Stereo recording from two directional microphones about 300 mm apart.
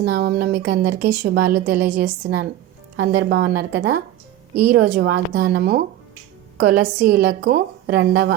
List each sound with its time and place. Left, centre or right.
0.0 s a woman's voice: right